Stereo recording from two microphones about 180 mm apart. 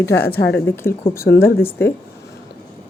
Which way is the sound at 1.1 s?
60° left (ahead or behind).